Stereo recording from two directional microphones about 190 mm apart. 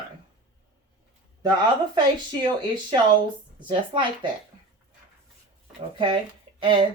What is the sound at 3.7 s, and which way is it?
Speech, 25° right (ahead or behind).